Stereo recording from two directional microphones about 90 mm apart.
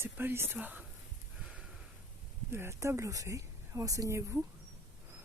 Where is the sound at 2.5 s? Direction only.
30° right (ahead or behind).